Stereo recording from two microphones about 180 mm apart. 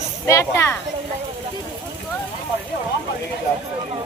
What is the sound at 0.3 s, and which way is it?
Speech, 15° left (ahead or behind).